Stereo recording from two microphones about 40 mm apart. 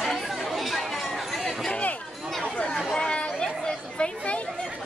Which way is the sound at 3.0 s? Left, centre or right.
Left.